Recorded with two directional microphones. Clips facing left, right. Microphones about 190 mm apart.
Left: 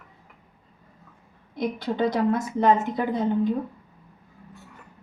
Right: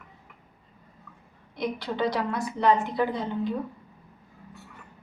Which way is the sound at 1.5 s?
50° left (ahead or behind).